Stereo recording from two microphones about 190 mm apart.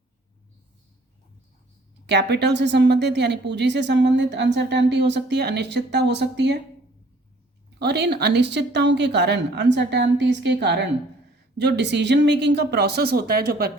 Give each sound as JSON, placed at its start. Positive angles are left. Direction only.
{"t": 2.0, "sound": "speech", "side_deg": -65}
{"t": 7.8, "sound": "speech", "side_deg": -60}